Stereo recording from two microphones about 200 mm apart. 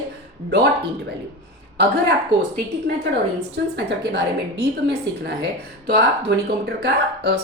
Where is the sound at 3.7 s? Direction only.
60° right (ahead or behind).